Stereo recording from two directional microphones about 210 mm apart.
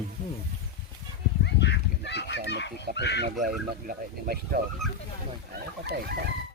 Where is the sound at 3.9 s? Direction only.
45° right (ahead or behind).